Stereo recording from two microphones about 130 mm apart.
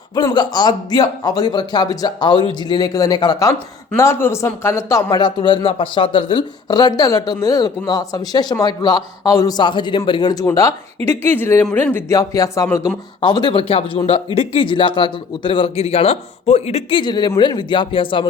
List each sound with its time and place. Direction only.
0.3 s speech: 35° left (ahead or behind)
3.9 s speech: 20° left (ahead or behind)
5.2 s speech: 35° left (ahead or behind)
13.2 s speech: 35° left (ahead or behind); by 17.0 s 55° left (ahead or behind)
17.0 s speech: 35° left (ahead or behind)